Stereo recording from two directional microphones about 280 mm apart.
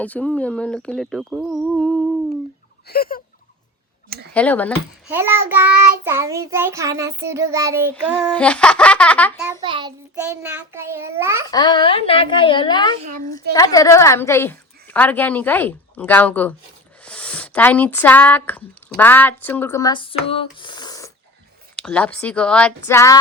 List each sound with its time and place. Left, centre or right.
0.0 s speech: centre
2.8 s a sound: left
4.4 s speech: centre
5.0 s a child's voice: centre
9.5 s a child's voice: centre
11.5 s a woman's voice: centre
13.0 s a woman's voice: right
13.5 s a woman's voice: centre